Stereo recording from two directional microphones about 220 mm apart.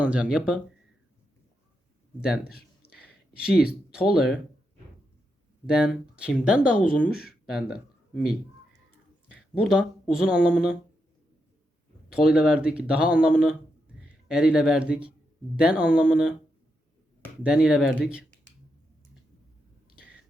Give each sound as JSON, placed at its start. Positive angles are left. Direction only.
{"t": 0.0, "sound": "speech", "side_deg": -5}
{"t": 2.2, "sound": "speech", "side_deg": -5}
{"t": 2.6, "sound": "a sound", "side_deg": 45}
{"t": 3.3, "sound": "speech", "side_deg": -5}
{"t": 5.6, "sound": "speech", "side_deg": -5}
{"t": 7.3, "sound": "a sound", "side_deg": 0}
{"t": 9.6, "sound": "speech", "side_deg": 0}
{"t": 12.0, "sound": "a man's voice", "side_deg": -5}
{"t": 17.4, "sound": "speech", "side_deg": -5}